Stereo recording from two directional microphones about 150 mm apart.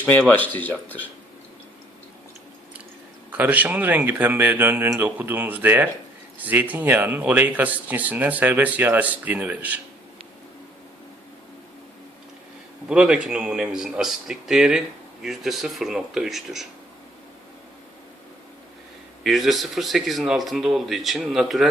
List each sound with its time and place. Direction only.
0.0 s speech: 10° left (ahead or behind)
3.2 s speech: 10° right (ahead or behind)
12.9 s speech: 5° right (ahead or behind)
19.2 s speech: centre (ahead or behind)